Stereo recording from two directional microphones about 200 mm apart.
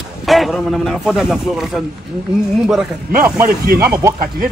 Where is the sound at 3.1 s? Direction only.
15° right (ahead or behind).